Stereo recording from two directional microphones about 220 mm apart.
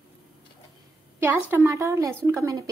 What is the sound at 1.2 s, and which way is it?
Speech, 10° right (ahead or behind).